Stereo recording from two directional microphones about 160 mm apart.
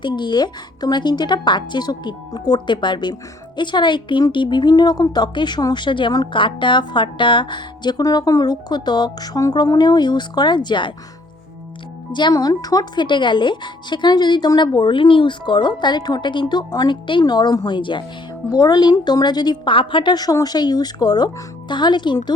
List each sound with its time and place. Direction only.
0.0 s speech: 30° left (ahead or behind)
12.1 s speech: 25° left (ahead or behind)